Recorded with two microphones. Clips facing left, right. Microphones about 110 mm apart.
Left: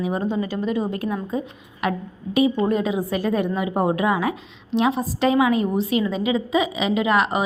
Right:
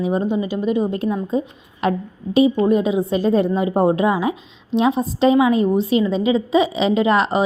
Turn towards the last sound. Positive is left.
turn(degrees=-30)  # may be behind; listen again after turning